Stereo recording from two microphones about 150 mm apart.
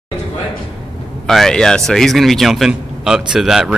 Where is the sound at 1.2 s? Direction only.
Centre (ahead or behind).